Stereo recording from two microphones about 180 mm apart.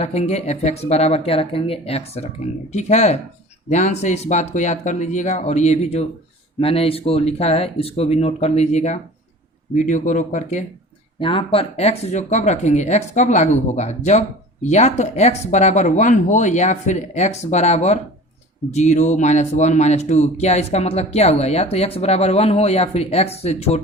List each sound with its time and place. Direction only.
0.0 s speech: 35° left (ahead or behind)
11.2 s speech: 30° left (ahead or behind)